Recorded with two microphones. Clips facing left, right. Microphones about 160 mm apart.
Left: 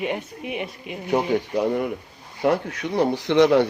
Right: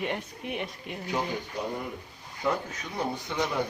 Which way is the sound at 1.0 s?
65° left (ahead or behind).